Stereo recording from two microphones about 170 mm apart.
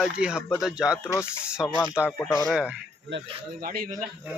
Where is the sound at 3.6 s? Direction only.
60° right (ahead or behind).